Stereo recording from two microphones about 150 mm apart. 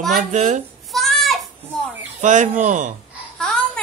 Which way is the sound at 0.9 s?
Centre (ahead or behind).